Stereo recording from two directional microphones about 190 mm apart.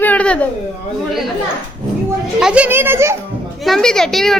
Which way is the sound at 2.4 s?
5° right (ahead or behind).